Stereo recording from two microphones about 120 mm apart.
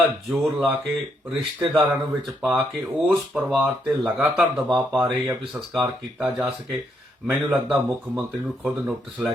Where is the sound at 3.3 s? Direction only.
5° right (ahead or behind).